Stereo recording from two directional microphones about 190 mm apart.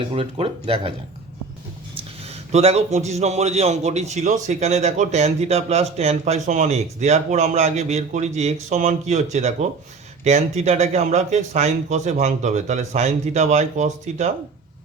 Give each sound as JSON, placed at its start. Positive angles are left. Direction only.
{"t": 0.1, "sound": "speech", "side_deg": -30}
{"t": 2.5, "sound": "speech", "side_deg": -35}